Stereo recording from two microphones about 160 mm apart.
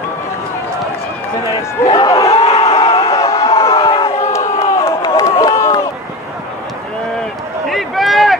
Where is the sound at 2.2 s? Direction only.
35° left (ahead or behind).